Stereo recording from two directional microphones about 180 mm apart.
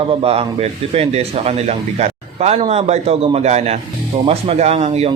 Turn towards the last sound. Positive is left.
turn(degrees=-35)  # may be behind; listen again after turning